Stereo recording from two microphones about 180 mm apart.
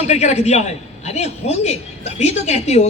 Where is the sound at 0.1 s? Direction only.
40° left (ahead or behind).